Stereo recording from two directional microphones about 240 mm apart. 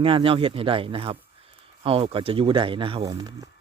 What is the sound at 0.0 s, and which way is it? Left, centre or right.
Speech, right.